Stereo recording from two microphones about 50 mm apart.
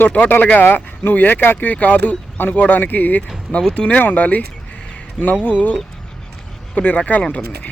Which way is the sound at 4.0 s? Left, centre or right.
Left.